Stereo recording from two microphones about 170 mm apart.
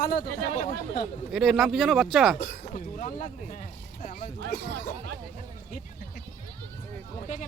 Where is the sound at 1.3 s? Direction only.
Centre (ahead or behind).